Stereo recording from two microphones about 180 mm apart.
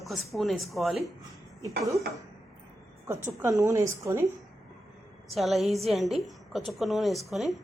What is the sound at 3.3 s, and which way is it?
Speech, 15° right (ahead or behind).